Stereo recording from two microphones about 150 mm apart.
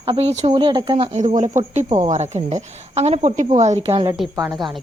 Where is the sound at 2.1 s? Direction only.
50° right (ahead or behind).